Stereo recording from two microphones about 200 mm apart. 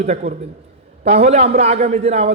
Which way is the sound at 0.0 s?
35° right (ahead or behind).